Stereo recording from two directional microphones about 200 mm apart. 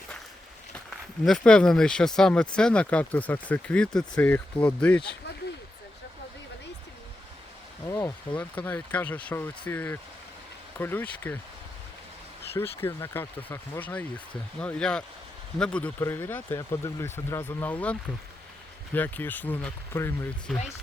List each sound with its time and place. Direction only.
1.2 s speech: 5° left (ahead or behind)
7.9 s speech: 20° left (ahead or behind)
8.3 s speech: 10° left (ahead or behind)
12.5 s speech: 15° left (ahead or behind)
18.9 s speech: 10° left (ahead or behind)
20.5 s speech: centre (ahead or behind)